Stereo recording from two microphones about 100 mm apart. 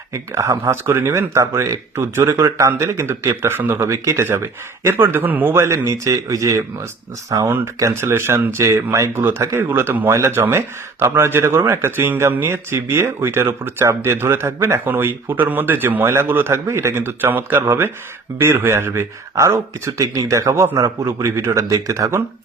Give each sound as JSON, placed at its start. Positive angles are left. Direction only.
{"t": 0.1, "sound": "speech", "side_deg": -30}